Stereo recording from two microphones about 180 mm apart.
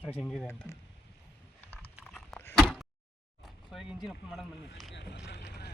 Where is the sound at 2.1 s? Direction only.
Centre (ahead or behind).